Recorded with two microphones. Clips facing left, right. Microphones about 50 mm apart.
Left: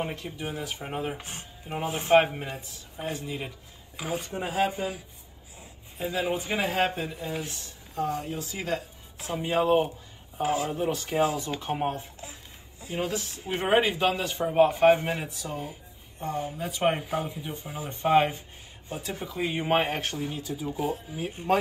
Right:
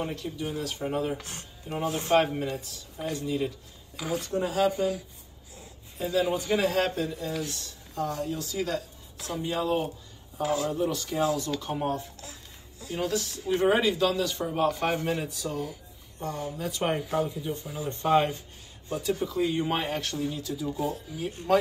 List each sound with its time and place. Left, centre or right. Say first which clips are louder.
0.0 s a man's voice: right 1 dB; left
19.7 s speech: left 4 dB; left